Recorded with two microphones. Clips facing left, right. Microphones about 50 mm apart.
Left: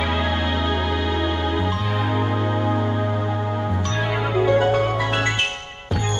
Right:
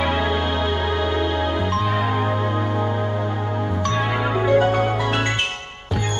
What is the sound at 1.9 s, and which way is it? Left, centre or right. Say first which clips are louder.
Music: right 2 dB; centre.